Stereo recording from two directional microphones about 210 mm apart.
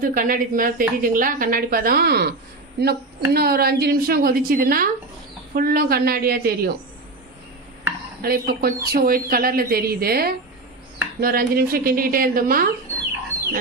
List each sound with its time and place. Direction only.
0.0 s a woman's voice: 40° right (ahead or behind)
8.2 s a woman's voice: 45° right (ahead or behind)